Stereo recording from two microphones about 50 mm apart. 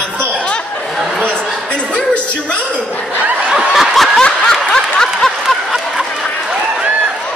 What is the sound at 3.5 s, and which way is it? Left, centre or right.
Snicker, centre.